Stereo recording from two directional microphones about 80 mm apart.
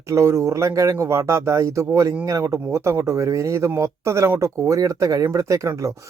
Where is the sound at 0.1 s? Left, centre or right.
Right.